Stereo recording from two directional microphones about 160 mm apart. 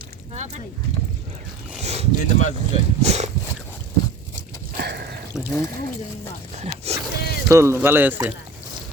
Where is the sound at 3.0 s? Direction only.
40° right (ahead or behind).